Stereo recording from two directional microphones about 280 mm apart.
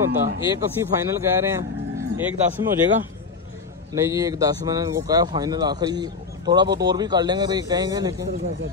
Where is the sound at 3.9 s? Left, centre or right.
Centre.